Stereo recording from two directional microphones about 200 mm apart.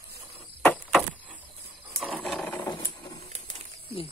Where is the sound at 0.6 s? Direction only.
Centre (ahead or behind).